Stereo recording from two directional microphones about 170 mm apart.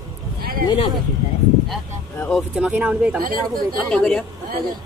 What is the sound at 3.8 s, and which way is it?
Speech, 5° left (ahead or behind).